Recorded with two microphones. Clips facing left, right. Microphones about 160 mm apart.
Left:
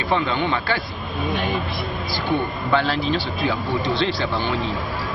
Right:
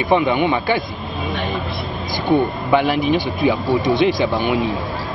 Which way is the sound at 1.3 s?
Centre (ahead or behind).